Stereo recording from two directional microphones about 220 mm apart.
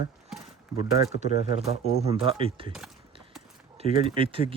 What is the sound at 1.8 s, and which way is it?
Speech, 30° right (ahead or behind).